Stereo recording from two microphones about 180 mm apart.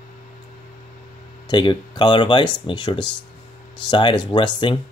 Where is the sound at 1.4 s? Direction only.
25° left (ahead or behind).